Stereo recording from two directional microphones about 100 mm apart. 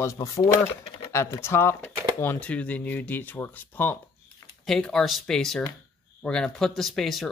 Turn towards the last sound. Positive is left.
turn(degrees=0)  # may be behind; listen again after turning